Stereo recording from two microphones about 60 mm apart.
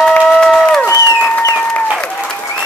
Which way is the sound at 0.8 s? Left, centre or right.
Left.